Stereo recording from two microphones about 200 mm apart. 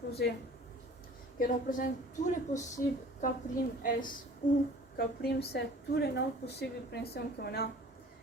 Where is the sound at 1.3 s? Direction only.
45° left (ahead or behind).